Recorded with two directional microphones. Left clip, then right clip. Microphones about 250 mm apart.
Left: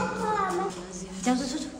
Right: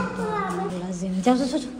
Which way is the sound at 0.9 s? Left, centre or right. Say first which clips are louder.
Right 7 dB; centre.